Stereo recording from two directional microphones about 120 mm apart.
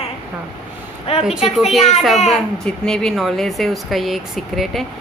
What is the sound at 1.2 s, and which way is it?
Speech, centre (ahead or behind).